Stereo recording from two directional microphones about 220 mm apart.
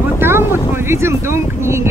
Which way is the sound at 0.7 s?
10° right (ahead or behind).